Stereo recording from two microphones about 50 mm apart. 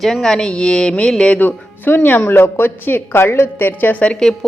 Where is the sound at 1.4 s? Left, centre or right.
Left.